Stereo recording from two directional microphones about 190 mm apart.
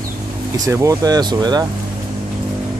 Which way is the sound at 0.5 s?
15° right (ahead or behind).